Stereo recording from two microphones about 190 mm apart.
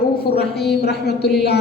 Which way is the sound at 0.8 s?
60° left (ahead or behind).